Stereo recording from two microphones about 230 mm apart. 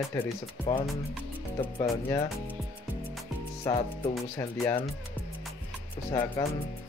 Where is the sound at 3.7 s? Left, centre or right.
Centre.